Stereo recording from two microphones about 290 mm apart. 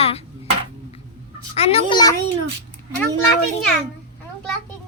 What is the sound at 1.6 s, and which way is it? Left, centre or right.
Speech, left.